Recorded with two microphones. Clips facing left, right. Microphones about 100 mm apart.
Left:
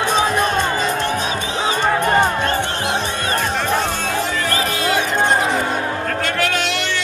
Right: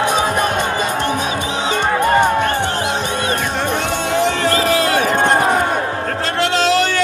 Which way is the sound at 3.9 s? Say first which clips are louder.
Right 4 dB; 20° right (ahead or behind).